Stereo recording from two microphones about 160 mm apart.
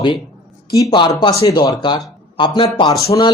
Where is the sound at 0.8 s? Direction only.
25° left (ahead or behind).